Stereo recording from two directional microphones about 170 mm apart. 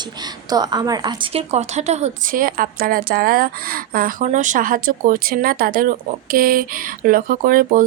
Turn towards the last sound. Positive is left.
turn(degrees=-55)  # may be behind; listen again after turning